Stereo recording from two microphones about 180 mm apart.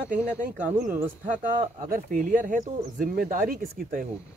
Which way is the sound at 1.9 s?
50° right (ahead or behind).